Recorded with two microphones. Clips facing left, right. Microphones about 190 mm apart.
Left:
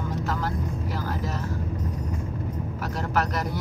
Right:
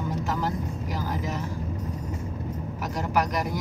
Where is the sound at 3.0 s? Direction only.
15° right (ahead or behind).